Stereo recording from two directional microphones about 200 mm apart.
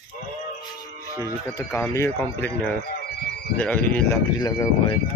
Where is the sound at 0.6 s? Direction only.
20° left (ahead or behind).